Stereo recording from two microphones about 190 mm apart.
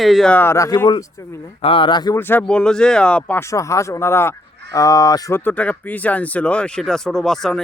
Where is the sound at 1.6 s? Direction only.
25° left (ahead or behind).